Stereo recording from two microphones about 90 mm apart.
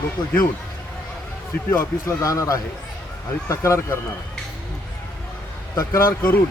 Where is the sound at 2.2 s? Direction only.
40° left (ahead or behind).